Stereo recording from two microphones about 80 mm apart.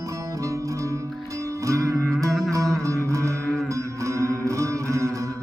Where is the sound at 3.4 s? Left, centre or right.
Centre.